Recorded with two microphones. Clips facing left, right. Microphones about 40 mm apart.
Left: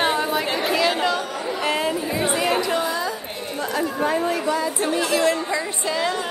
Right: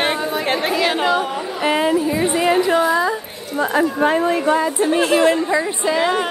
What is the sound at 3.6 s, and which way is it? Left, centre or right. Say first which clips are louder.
Speech: right 7 dB; right.